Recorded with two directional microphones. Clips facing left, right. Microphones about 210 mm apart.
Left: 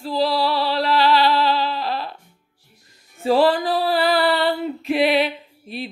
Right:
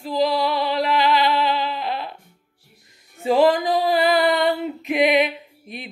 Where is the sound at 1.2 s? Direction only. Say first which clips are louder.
Left 2 dB; 20° right (ahead or behind).